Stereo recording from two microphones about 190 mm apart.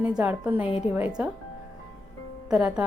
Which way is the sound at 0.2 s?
10° right (ahead or behind).